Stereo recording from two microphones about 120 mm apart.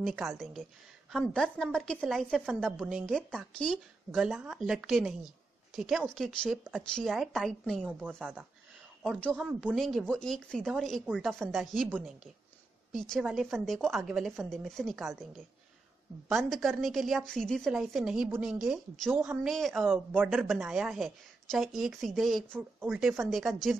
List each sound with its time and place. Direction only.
0.0 s a woman's voice: 5° right (ahead or behind)
4.2 s speech: 5° right (ahead or behind)
8.2 s speech: 15° right (ahead or behind)
9.8 s speech: centre (ahead or behind)
16.3 s speech: centre (ahead or behind)
19.9 s speech: 15° right (ahead or behind)
20.4 s speech: centre (ahead or behind)